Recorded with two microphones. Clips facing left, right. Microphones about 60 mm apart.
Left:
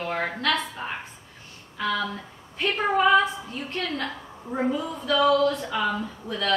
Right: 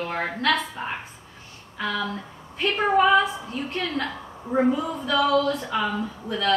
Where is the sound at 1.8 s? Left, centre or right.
Centre.